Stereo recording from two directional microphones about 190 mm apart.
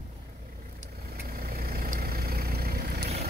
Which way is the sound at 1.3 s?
50° right (ahead or behind).